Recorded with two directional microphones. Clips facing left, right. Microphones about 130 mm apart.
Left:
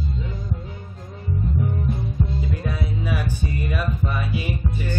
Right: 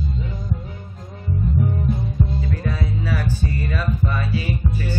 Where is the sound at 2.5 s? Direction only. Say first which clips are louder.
Right 2 dB; 15° left (ahead or behind).